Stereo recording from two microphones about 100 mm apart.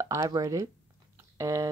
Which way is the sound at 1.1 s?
30° right (ahead or behind).